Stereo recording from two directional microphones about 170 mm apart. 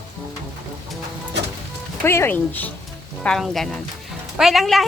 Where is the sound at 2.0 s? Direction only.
15° left (ahead or behind).